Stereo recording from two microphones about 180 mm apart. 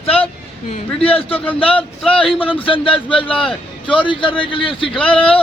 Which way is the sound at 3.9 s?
30° left (ahead or behind).